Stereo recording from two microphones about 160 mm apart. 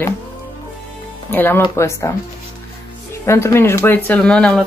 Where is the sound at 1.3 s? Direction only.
10° left (ahead or behind).